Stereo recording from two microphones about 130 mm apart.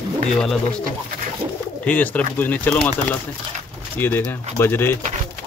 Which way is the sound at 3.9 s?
15° left (ahead or behind).